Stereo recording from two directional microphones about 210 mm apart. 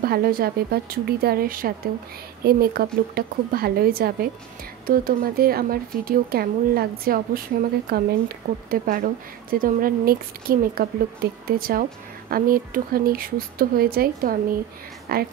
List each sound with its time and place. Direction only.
0.0 s speech: 45° right (ahead or behind)
8.6 s a woman's voice: 45° right (ahead or behind)